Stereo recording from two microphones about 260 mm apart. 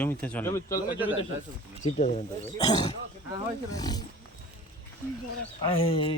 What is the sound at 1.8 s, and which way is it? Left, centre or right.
Speech, left.